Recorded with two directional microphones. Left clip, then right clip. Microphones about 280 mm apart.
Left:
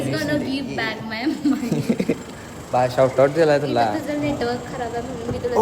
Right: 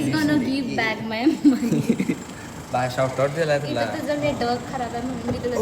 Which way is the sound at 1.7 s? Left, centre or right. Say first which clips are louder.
Left 1 dB; centre.